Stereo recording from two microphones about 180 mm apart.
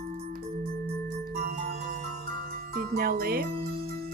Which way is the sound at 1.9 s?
40° right (ahead or behind).